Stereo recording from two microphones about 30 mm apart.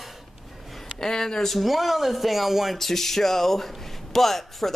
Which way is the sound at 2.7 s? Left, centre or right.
Centre.